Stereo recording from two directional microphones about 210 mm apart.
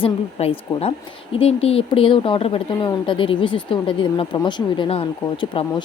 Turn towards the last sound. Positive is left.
turn(degrees=20)  # may be behind; listen again after turning